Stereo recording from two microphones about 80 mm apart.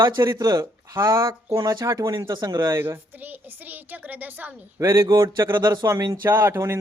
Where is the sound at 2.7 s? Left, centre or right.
Right.